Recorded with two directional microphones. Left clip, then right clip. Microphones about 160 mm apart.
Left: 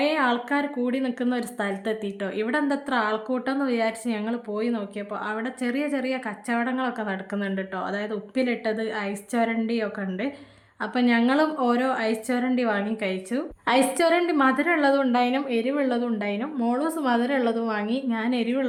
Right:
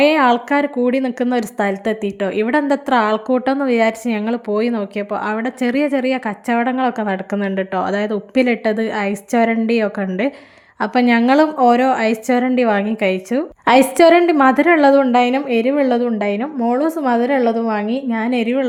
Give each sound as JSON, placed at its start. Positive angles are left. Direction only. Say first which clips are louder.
{"t": 0.0, "sound": "speech", "louder": "right 10 dB", "side_deg": -45}